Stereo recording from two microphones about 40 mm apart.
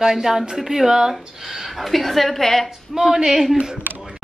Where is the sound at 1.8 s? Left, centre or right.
Centre.